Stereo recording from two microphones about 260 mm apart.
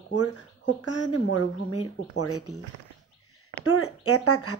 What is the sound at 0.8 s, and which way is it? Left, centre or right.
Speech, left.